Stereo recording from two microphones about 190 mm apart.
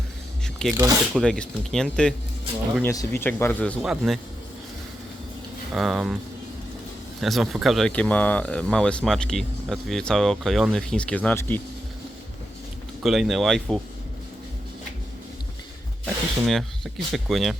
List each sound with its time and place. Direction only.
0.7 s speech: 15° right (ahead or behind)
1.1 s speech: 5° left (ahead or behind)
2.8 s speech: 15° left (ahead or behind); by 4.2 s centre (ahead or behind)
5.7 s speech: centre (ahead or behind)
7.2 s speech: centre (ahead or behind)
13.0 s speech: centre (ahead or behind)
16.5 s speech: centre (ahead or behind)